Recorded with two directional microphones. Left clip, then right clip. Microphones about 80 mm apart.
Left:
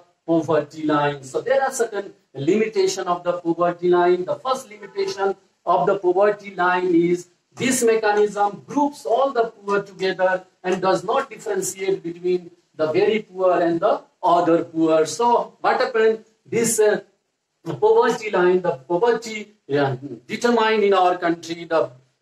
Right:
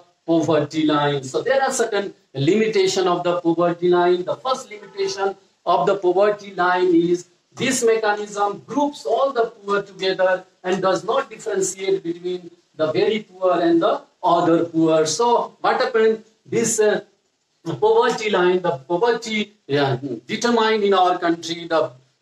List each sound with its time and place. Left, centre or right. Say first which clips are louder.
0.3 s speech: right 1 dB; right
2.5 s speech: right 2 dB; right
6.4 s speech: right 2 dB; right